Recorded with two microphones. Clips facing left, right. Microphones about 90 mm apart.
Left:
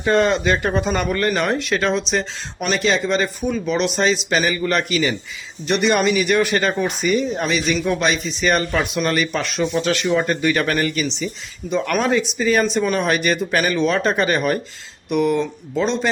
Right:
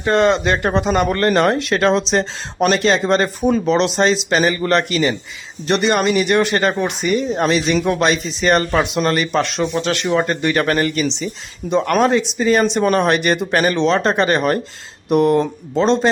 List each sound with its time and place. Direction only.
0.1 s speech: 30° right (ahead or behind)
1.0 s speech: 40° right (ahead or behind)
6.5 s speech: 20° right (ahead or behind)
7.1 s speech: 35° right (ahead or behind)